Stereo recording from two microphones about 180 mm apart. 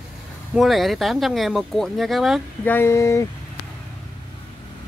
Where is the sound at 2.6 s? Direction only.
10° left (ahead or behind).